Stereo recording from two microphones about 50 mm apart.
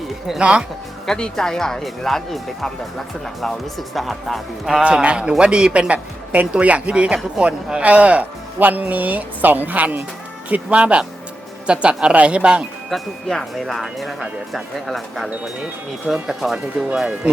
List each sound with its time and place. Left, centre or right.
0.3 s a man's voice: right
1.0 s speech: centre
4.8 s a man's voice: right
5.9 s a woman's voice: right
10.5 s a man's voice: right
12.9 s speech: centre